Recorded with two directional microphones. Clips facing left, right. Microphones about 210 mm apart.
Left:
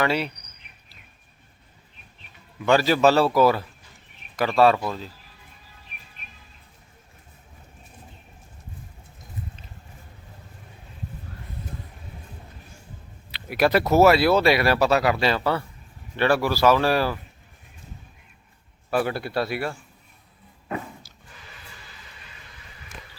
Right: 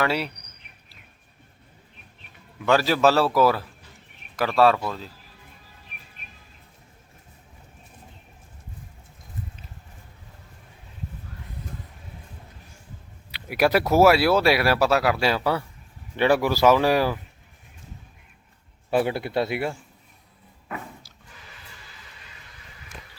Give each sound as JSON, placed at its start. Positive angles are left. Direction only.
{"t": 0.0, "sound": "speech", "side_deg": -5}
{"t": 2.6, "sound": "speech", "side_deg": 0}
{"t": 13.3, "sound": "speech", "side_deg": -10}
{"t": 18.9, "sound": "speech", "side_deg": -20}